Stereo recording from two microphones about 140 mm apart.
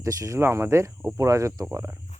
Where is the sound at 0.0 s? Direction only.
20° right (ahead or behind).